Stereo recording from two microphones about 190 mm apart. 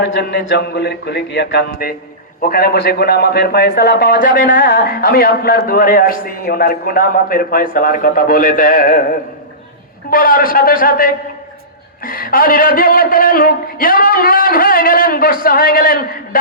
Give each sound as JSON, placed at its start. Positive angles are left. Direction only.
{"t": 0.0, "sound": "a man's voice", "side_deg": 65}
{"t": 10.1, "sound": "a man's voice", "side_deg": 50}